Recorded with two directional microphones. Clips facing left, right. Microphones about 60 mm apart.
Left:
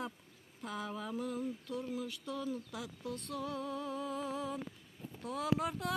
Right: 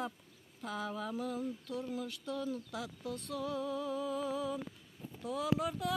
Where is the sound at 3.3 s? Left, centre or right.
Left.